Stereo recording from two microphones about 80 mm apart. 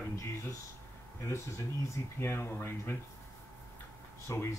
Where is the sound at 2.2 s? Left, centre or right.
Left.